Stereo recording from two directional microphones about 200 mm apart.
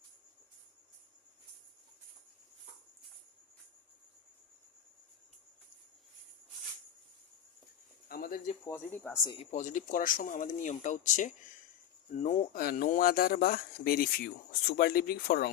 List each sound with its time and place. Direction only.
8.0 s a sound: 45° left (ahead or behind)
8.6 s speech: 10° left (ahead or behind)
9.2 s speech: 25° left (ahead or behind)
9.5 s speech: 40° left (ahead or behind)
12.5 s speech: 45° left (ahead or behind)